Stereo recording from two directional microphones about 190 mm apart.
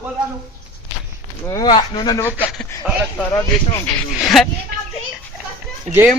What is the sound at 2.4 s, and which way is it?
Speech, 10° left (ahead or behind).